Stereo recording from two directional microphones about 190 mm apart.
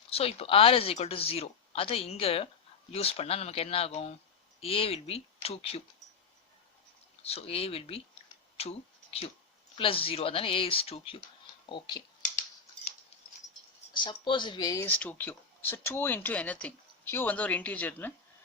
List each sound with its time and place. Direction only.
0.1 s speech: 30° left (ahead or behind)
7.2 s speech: 30° left (ahead or behind)
8.5 s a sound: 30° left (ahead or behind)
9.7 s speech: 30° left (ahead or behind)
12.2 s typing: 40° left (ahead or behind)
13.9 s speech: 25° left (ahead or behind)
14.8 s speech: 10° left (ahead or behind)